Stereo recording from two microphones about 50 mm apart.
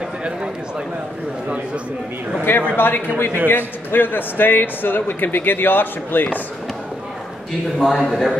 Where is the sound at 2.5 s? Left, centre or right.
Left.